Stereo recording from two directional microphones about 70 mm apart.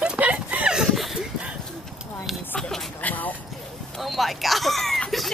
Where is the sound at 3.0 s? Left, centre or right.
Left.